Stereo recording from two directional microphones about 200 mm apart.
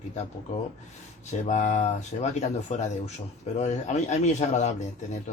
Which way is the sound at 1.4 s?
35° left (ahead or behind).